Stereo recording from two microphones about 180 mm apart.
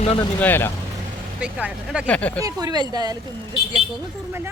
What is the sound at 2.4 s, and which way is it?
Speech, 20° right (ahead or behind).